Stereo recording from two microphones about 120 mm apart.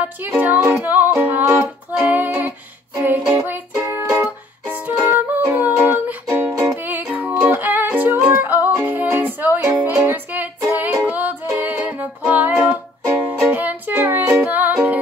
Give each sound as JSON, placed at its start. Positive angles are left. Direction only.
{"t": 0.0, "sound": "music", "side_deg": -15}
{"t": 3.8, "sound": "music", "side_deg": -25}